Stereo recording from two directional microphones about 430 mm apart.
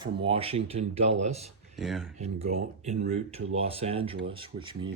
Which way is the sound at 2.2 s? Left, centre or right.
Centre.